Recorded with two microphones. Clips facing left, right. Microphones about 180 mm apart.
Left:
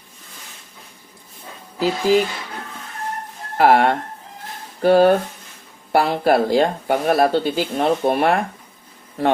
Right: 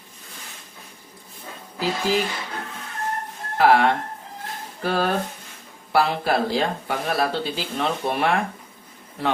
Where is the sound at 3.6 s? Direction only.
50° left (ahead or behind).